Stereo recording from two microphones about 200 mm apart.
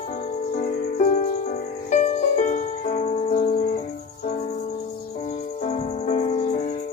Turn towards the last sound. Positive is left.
turn(degrees=35)  # may be behind; listen again after turning